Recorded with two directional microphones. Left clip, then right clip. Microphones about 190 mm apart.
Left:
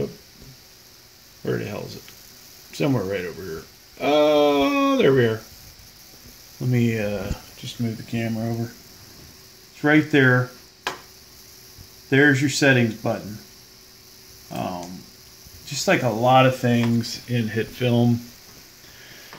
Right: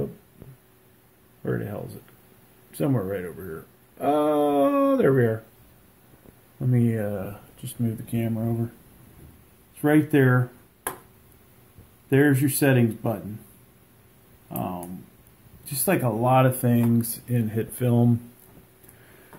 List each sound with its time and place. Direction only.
1.4 s a sound: 10° left (ahead or behind)
6.7 s a sound: 15° left (ahead or behind)
7.8 s speech: 10° right (ahead or behind)
9.8 s speech: 5° right (ahead or behind)
12.1 s speech: 5° right (ahead or behind)
14.5 s speech: centre (ahead or behind)